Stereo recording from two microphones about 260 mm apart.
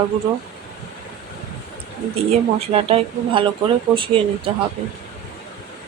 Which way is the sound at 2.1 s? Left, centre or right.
Right.